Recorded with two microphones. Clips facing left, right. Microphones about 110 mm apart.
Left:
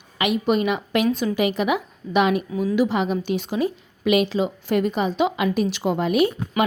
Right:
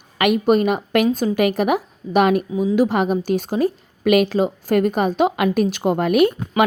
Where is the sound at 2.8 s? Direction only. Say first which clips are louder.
Right 3 dB; 50° right (ahead or behind).